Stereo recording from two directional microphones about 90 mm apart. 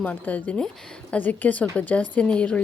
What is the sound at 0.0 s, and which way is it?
Speech, 15° left (ahead or behind).